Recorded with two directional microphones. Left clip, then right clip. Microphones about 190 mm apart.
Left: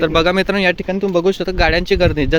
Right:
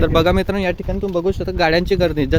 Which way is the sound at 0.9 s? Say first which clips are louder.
Left 4 dB; 15° left (ahead or behind).